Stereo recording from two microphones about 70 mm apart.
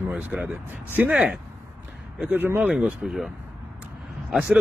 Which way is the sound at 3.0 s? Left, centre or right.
Centre.